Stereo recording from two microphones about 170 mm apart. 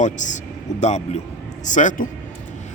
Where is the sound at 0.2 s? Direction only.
45° left (ahead or behind).